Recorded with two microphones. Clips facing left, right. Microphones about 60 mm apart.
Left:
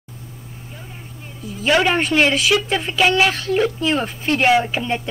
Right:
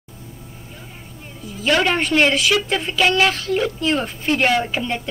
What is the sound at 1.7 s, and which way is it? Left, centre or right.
Speech, centre.